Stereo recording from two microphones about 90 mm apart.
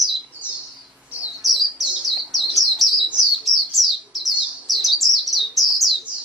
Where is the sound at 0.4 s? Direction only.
15° right (ahead or behind).